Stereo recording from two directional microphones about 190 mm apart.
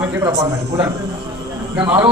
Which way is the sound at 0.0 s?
10° right (ahead or behind).